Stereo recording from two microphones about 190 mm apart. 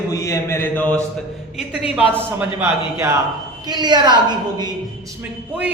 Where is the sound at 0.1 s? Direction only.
15° left (ahead or behind).